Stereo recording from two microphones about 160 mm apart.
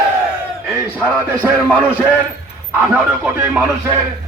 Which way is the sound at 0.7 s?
10° right (ahead or behind).